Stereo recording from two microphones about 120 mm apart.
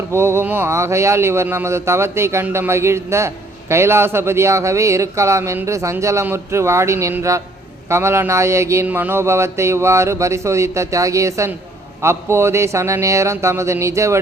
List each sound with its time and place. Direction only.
0.1 s speech: 20° right (ahead or behind)